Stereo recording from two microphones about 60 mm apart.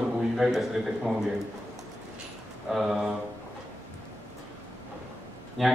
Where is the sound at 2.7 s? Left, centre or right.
Centre.